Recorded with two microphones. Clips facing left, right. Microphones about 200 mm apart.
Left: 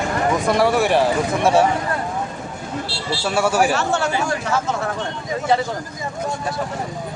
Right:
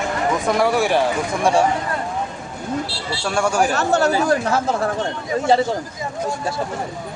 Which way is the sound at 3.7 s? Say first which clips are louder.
Right 3 dB; 40° right (ahead or behind).